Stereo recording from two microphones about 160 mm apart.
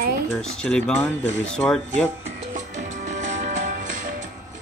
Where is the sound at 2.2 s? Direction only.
45° right (ahead or behind).